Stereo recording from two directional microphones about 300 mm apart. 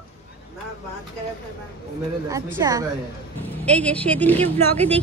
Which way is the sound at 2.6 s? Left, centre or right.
Centre.